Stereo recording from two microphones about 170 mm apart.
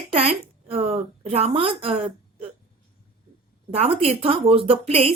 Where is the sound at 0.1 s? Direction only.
35° right (ahead or behind).